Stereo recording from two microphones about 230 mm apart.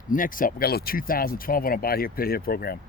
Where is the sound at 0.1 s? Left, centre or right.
Left.